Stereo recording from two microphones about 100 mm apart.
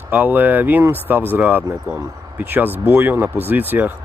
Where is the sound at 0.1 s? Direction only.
20° right (ahead or behind).